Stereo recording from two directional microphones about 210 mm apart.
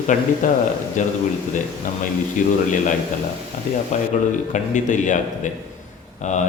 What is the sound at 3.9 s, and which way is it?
Speech, 35° left (ahead or behind).